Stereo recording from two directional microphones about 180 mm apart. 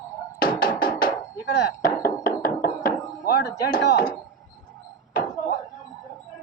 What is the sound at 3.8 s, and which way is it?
Speech, 70° left (ahead or behind).